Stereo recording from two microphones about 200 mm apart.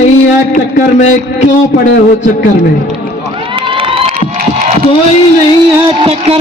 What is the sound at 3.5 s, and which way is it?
Crowd, 25° right (ahead or behind).